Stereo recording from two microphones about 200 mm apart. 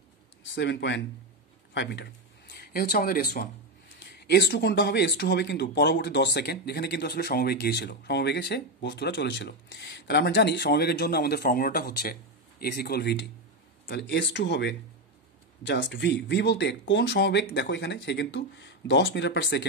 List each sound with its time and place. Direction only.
0.6 s speech: 60° left (ahead or behind)